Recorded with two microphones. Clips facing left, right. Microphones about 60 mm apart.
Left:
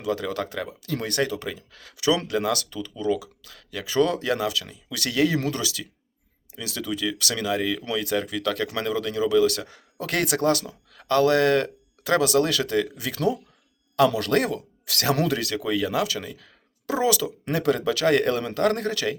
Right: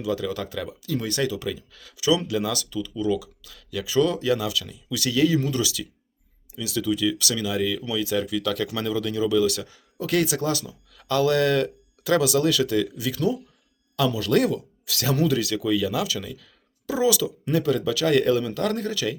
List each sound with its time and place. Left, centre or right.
0.0 s speech: left
4.5 s speech: left
4.9 s speech: left
5.5 s speech: left
7.9 s speech: left
13.1 s speech: left
14.3 s speech: left